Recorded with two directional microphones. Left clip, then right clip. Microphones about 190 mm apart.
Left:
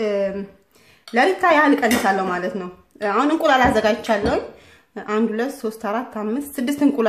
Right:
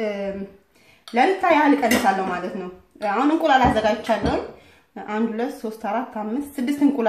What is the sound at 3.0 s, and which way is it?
Speech, 45° left (ahead or behind).